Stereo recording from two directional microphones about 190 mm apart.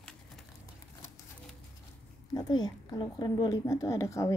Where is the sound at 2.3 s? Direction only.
20° left (ahead or behind).